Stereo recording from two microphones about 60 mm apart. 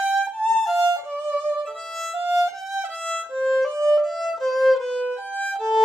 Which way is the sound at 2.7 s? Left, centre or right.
Centre.